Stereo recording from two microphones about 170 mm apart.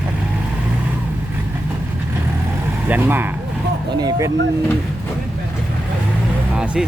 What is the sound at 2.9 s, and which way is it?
Speech, 10° right (ahead or behind).